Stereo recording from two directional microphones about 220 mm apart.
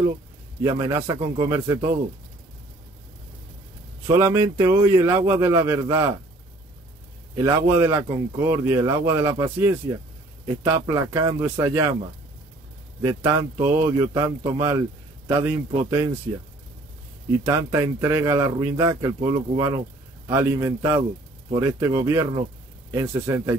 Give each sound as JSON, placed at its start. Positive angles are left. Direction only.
{"t": 0.6, "sound": "speech", "side_deg": -15}
{"t": 4.1, "sound": "speech", "side_deg": -10}
{"t": 7.3, "sound": "speech", "side_deg": -10}
{"t": 13.0, "sound": "speech", "side_deg": -10}
{"t": 17.5, "sound": "speech", "side_deg": -15}